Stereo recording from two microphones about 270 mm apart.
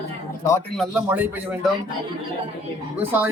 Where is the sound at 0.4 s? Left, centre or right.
Centre.